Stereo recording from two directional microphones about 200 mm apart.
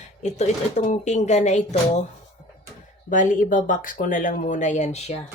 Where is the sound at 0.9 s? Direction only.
35° left (ahead or behind).